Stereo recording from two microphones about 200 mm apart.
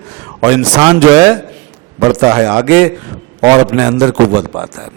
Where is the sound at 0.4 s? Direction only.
20° right (ahead or behind).